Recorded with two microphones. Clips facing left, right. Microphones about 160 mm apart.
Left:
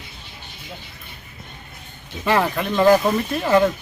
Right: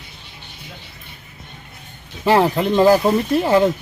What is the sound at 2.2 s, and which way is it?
Speech, 30° right (ahead or behind).